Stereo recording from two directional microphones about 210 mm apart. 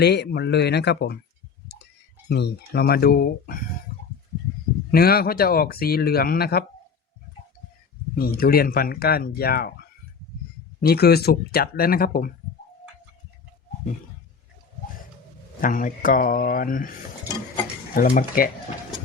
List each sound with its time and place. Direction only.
0.0 s speech: 50° left (ahead or behind)
1.6 s tick-tock: 55° left (ahead or behind)
2.3 s speech: 50° left (ahead or behind)
4.9 s speech: 45° left (ahead or behind)
8.1 s speech: 45° left (ahead or behind)
10.8 s speech: 50° left (ahead or behind)
15.6 s speech: 40° left (ahead or behind)
17.9 s speech: 40° left (ahead or behind)